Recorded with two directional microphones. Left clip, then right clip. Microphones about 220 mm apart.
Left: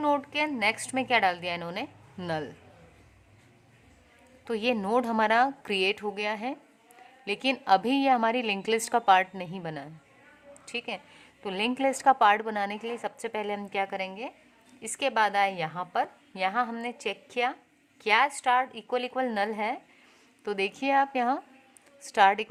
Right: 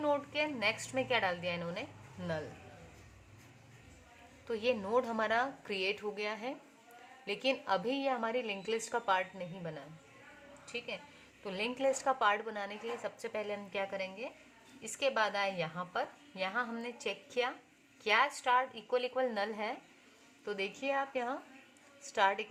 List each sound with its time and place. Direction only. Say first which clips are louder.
0.0 s a woman's voice: left 6 dB; 40° left (ahead or behind)
4.4 s a woman's voice: left 6 dB; 45° left (ahead or behind)